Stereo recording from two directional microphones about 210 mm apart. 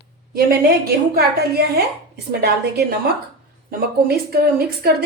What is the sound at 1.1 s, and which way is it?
A woman's voice, 50° right (ahead or behind).